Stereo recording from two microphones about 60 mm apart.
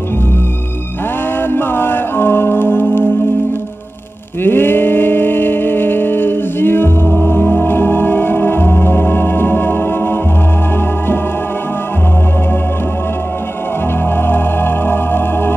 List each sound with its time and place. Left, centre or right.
1.5 s music: left
4.4 s a sound: left
14.1 s music: left